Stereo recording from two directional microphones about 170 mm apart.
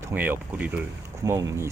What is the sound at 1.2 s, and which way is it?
Speech, 20° right (ahead or behind).